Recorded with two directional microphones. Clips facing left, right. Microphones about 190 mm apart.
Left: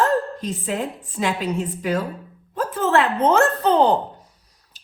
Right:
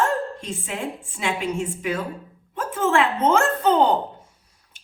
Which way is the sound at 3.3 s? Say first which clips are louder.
Left 1 dB; 35° left (ahead or behind).